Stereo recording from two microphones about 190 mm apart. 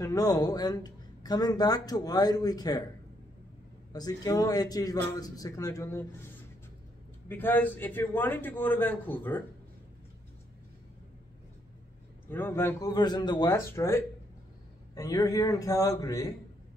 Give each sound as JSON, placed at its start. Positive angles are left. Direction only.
{"t": 0.0, "sound": "speech", "side_deg": 20}
{"t": 3.9, "sound": "speech", "side_deg": 20}
{"t": 7.2, "sound": "a man's voice", "side_deg": 10}
{"t": 12.3, "sound": "a man's voice", "side_deg": 10}